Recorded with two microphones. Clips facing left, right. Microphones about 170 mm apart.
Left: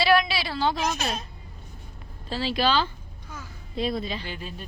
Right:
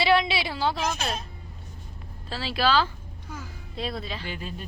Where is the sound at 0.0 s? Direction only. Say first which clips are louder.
Left 1 dB; 20° right (ahead or behind).